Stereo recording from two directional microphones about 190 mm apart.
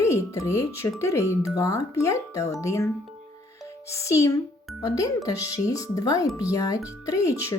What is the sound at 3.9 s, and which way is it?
Speech, 15° left (ahead or behind).